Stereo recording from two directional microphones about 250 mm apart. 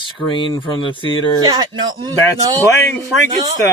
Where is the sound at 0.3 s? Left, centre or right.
Centre.